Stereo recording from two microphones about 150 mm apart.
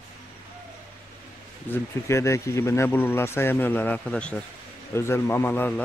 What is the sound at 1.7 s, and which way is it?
Speech, 20° left (ahead or behind).